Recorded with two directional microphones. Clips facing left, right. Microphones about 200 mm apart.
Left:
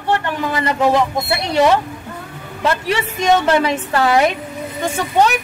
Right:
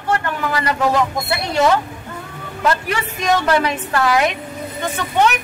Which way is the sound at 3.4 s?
25° left (ahead or behind).